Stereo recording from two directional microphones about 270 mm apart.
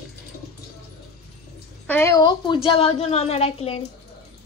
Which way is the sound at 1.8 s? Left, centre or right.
Centre.